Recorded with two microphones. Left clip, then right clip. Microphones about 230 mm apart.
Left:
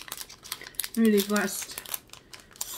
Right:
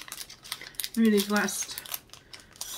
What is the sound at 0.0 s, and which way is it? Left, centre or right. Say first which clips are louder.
Crumpling: left 1 dB; centre.